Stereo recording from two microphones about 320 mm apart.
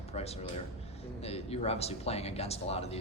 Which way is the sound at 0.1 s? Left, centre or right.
Centre.